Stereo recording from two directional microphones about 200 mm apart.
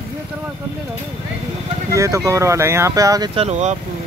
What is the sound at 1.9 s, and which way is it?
Speech, 15° right (ahead or behind).